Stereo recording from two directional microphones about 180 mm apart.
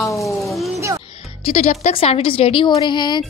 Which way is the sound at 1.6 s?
45° left (ahead or behind).